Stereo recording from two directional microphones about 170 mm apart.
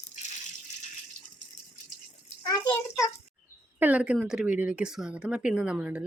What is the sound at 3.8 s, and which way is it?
Speech, 10° right (ahead or behind).